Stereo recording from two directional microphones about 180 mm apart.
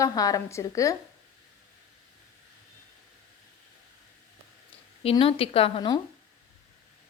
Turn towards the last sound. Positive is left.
turn(degrees=30)  # may be behind; listen again after turning